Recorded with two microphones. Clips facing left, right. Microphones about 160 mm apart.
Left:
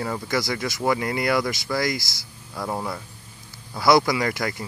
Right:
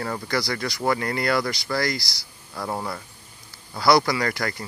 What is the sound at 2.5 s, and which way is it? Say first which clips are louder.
Speech: left 1 dB; centre (ahead or behind).